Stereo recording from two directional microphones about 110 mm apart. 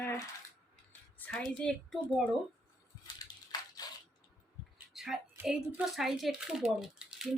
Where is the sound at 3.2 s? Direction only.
35° left (ahead or behind).